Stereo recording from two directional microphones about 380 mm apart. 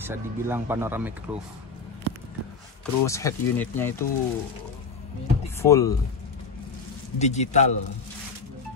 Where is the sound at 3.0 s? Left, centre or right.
Centre.